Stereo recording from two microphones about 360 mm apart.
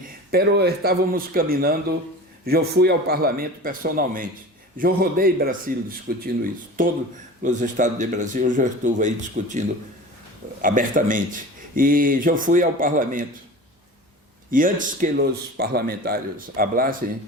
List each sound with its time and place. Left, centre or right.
0.3 s speech: right
14.5 s speech: right